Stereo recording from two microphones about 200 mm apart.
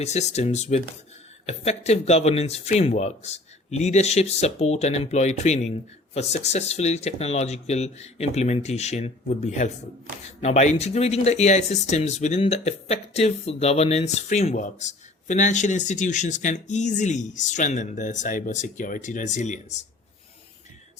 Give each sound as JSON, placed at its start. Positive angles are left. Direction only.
{"t": 0.0, "sound": "speech", "side_deg": 35}